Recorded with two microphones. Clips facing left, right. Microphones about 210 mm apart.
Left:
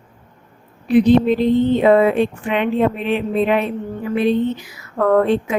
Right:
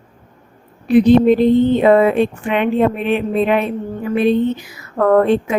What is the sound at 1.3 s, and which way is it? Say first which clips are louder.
Speech: right 3 dB; 50° right (ahead or behind).